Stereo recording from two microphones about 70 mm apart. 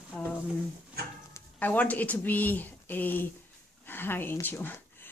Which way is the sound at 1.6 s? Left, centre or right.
Left.